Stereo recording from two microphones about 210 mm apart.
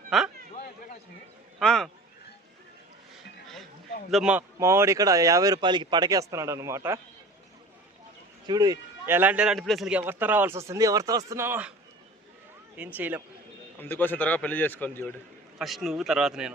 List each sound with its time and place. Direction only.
0.1 s a man's voice: centre (ahead or behind)
1.5 s a man's voice: centre (ahead or behind)
4.1 s speech: 5° right (ahead or behind)
8.4 s speech: 20° right (ahead or behind)
12.7 s speech: 10° right (ahead or behind)
13.7 s a man's voice: 10° left (ahead or behind)